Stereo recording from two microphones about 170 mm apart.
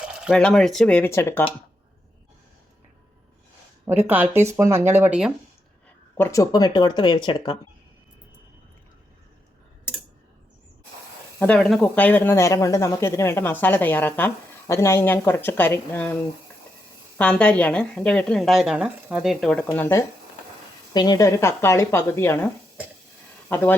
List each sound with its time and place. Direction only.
0.0 s a sound: 5° right (ahead or behind)
0.3 s speech: 5° left (ahead or behind)
3.8 s speech: 10° right (ahead or behind)
6.1 s speech: 20° left (ahead or behind)
11.3 s speech: 5° left (ahead or behind)
17.2 s speech: 10° left (ahead or behind)
20.9 s speech: 25° left (ahead or behind)